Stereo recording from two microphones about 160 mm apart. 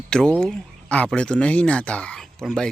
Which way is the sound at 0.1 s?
5° left (ahead or behind).